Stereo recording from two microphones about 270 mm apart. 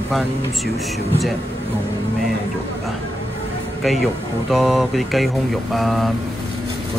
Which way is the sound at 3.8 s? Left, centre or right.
Centre.